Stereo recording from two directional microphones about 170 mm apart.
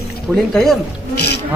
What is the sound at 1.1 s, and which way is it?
Speech, 75° left (ahead or behind).